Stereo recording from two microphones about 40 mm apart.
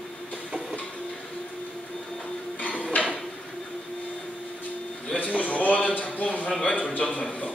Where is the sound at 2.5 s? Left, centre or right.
Left.